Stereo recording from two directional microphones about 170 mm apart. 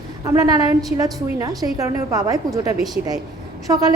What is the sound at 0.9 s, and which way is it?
A woman's voice, 20° right (ahead or behind).